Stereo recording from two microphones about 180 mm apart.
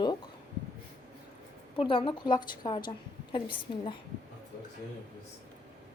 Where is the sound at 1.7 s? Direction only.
30° left (ahead or behind).